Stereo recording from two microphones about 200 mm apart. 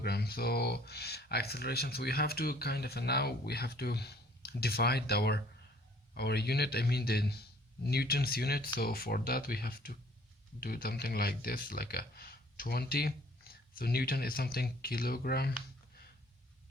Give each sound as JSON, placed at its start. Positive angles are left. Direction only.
{"t": 0.0, "sound": "speech", "side_deg": 50}